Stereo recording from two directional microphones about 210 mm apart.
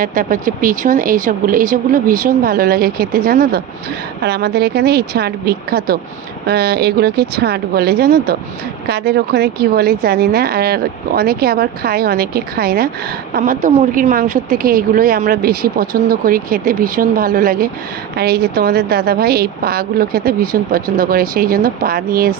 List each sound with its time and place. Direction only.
0.0 s a woman's voice: 40° right (ahead or behind)